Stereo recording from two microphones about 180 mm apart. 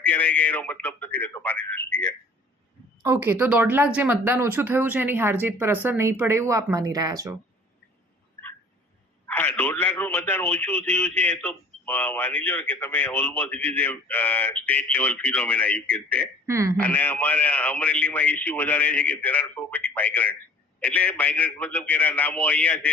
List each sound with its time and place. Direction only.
0.0 s a man's voice: 10° left (ahead or behind)
3.0 s speech: 15° right (ahead or behind)
9.2 s a man's voice: 10° left (ahead or behind)
16.5 s speech: 15° right (ahead or behind)
16.7 s a man's voice: 10° left (ahead or behind)